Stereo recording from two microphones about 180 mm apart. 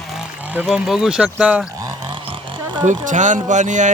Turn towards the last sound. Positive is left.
turn(degrees=-45)  # may be behind; listen again after turning